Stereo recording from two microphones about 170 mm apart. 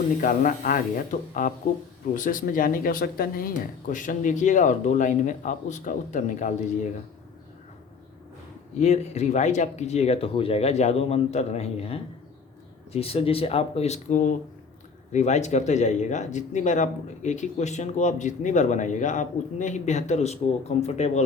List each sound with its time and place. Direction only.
0.2 s speech: 55° left (ahead or behind)
8.8 s speech: 40° left (ahead or behind)